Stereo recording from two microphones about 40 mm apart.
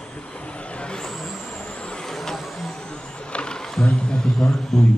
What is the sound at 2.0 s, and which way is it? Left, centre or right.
Vehicle, centre.